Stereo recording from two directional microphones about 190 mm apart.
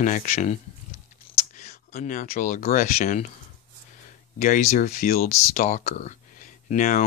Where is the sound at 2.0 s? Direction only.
45° left (ahead or behind).